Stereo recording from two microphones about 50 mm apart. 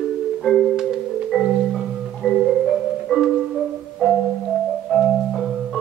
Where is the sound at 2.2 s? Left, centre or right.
Centre.